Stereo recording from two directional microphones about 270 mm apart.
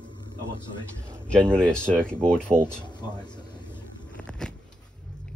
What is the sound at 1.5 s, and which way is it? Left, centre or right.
Speech, centre.